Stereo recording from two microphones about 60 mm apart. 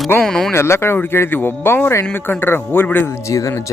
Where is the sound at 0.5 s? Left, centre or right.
Left.